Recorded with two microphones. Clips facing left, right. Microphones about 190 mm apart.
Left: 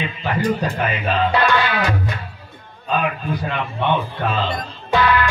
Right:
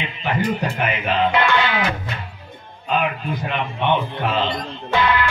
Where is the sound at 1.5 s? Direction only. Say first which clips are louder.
Left 1 dB; 20° right (ahead or behind).